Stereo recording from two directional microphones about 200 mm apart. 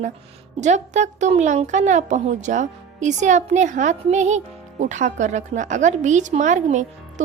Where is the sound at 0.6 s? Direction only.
35° right (ahead or behind).